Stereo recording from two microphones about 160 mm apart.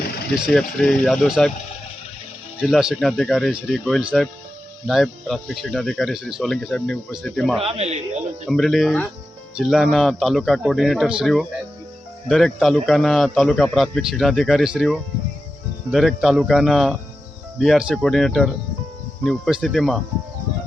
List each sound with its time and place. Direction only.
0.4 s speech: 5° left (ahead or behind)
2.6 s speech: 5° right (ahead or behind)
7.6 s speech: 40° right (ahead or behind)
8.4 s speech: centre (ahead or behind)